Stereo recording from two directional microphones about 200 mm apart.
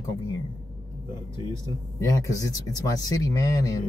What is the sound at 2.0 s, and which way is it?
Speech, 15° left (ahead or behind).